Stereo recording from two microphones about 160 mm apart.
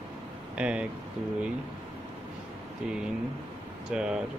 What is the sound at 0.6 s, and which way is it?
Speech, 5° right (ahead or behind).